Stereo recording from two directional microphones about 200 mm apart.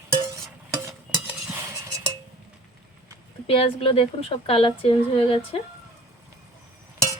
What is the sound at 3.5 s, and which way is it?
Speech, 30° left (ahead or behind).